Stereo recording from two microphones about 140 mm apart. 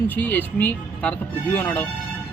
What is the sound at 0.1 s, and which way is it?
Speech, 10° left (ahead or behind).